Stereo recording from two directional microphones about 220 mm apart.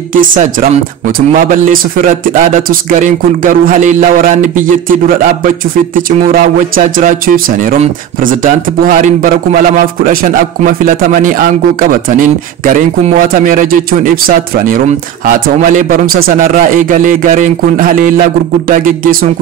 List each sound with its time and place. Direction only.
0.1 s speech: 35° right (ahead or behind)